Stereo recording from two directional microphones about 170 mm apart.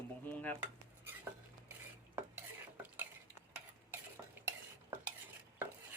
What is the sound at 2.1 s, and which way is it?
Stir, 10° right (ahead or behind).